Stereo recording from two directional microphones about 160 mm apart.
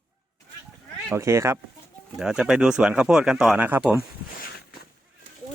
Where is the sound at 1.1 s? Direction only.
15° right (ahead or behind).